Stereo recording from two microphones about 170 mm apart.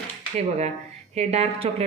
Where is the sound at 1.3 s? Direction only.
40° right (ahead or behind).